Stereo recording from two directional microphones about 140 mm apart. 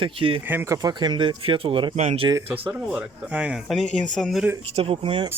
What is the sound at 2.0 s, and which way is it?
Speech, 50° right (ahead or behind).